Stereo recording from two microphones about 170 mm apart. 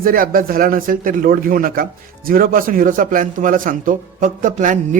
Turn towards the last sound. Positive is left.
turn(degrees=-50)  # may be behind; listen again after turning